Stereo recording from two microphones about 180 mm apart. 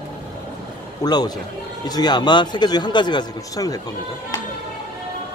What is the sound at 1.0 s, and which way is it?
A man's voice, 20° left (ahead or behind).